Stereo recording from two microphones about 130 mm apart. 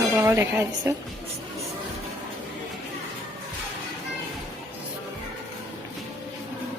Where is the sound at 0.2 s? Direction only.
20° right (ahead or behind).